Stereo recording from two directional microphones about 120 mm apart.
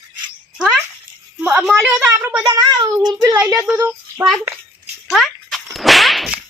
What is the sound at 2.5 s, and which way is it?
Child singing, 35° right (ahead or behind).